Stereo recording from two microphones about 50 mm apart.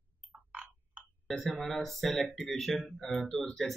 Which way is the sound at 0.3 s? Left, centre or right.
Right.